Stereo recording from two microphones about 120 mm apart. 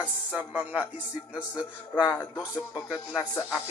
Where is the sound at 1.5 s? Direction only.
30° left (ahead or behind).